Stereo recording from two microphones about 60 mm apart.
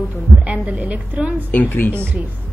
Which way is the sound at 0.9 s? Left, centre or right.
Right.